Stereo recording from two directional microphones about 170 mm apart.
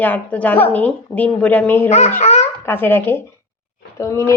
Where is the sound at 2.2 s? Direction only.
40° left (ahead or behind).